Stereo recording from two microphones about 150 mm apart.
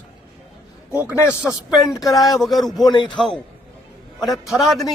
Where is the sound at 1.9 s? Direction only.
25° left (ahead or behind).